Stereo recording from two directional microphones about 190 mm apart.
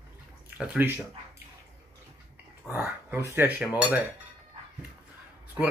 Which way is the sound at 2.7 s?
10° right (ahead or behind).